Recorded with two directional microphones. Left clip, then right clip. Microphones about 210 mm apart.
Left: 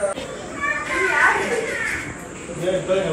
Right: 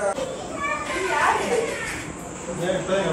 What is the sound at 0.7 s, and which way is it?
Children playing, centre (ahead or behind).